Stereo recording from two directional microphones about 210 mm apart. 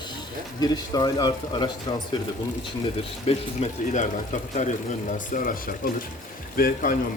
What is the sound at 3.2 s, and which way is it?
Speech, 35° left (ahead or behind).